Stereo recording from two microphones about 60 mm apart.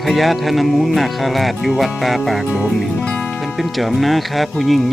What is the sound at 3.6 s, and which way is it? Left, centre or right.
Speech, centre.